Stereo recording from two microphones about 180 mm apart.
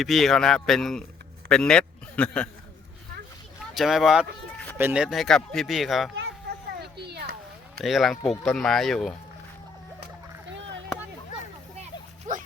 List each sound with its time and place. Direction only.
0.0 s speech: centre (ahead or behind)
3.8 s speech: centre (ahead or behind)
5.0 s speech: centre (ahead or behind)
7.0 s a sound: 65° right (ahead or behind)
7.8 s speech: centre (ahead or behind)